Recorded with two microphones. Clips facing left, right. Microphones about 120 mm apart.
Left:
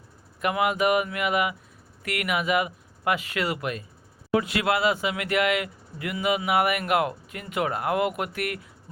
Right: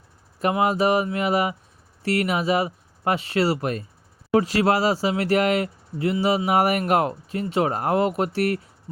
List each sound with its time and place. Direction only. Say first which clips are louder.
0.3 s speech: right 3 dB; 35° right (ahead or behind)